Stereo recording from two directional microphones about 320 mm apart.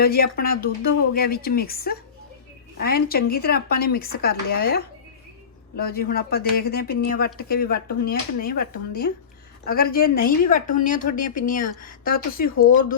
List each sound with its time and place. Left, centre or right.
0.0 s speech: left